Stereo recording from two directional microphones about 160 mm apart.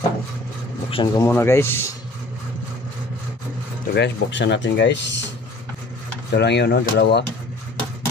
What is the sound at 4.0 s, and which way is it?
Speech, 90° left.